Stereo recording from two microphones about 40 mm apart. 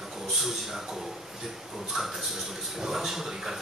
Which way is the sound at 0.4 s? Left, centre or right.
Centre.